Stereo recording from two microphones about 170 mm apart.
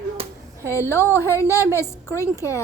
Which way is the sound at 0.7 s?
15° left (ahead or behind).